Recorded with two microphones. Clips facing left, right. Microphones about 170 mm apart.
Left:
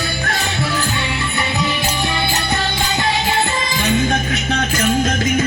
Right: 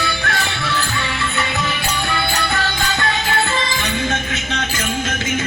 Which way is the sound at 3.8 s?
35° left (ahead or behind).